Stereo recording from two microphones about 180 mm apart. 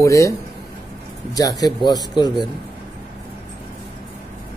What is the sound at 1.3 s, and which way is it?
Speech, 20° left (ahead or behind).